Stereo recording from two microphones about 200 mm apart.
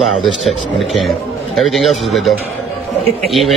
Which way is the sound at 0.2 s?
Centre (ahead or behind).